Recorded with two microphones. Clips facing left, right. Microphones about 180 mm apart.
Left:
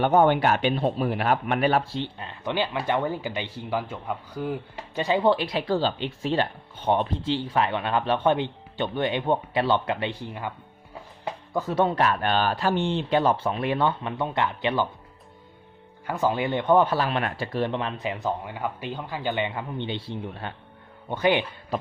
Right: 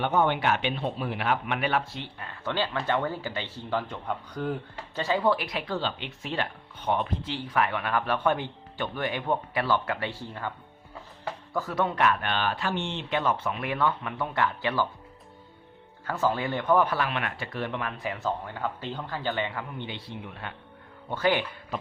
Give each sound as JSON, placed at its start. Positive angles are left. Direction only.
{"t": 0.0, "sound": "speech", "side_deg": 45}
{"t": 4.9, "sound": "speech", "side_deg": 20}
{"t": 16.0, "sound": "speech", "side_deg": 15}
{"t": 21.1, "sound": "speech", "side_deg": 20}
{"t": 21.7, "sound": "speech", "side_deg": 35}